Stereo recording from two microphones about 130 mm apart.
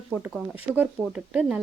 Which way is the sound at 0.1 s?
10° right (ahead or behind).